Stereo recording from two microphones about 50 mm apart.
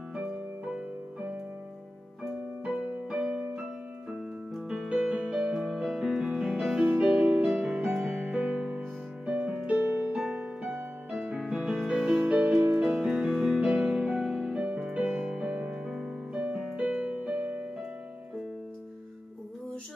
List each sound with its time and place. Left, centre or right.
0.1 s music: centre
3.1 s music: centre
4.6 s music: centre
5.9 s music: centre
10.1 s music: centre
11.3 s music: centre; by 14.2 s right
14.5 s music: centre
16.7 s keyboard: right